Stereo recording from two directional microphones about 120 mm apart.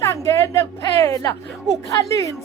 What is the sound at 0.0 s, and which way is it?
Speech, 25° left (ahead or behind).